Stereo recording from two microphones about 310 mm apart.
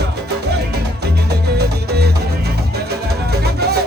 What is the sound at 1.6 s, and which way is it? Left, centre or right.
Music, right.